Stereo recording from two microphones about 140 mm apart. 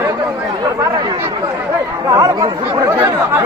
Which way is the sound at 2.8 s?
20° right (ahead or behind).